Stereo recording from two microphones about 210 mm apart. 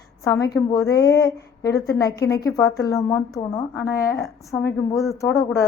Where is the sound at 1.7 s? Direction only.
50° left (ahead or behind).